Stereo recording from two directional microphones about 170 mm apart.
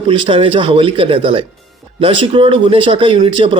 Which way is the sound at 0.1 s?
30° right (ahead or behind).